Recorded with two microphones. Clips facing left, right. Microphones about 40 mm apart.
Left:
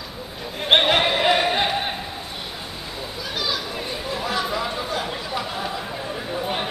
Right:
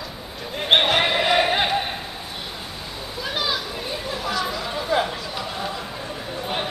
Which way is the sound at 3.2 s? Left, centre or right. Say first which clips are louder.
Right 2 dB; centre.